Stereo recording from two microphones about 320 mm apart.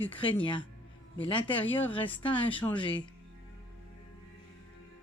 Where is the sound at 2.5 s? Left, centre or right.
Centre.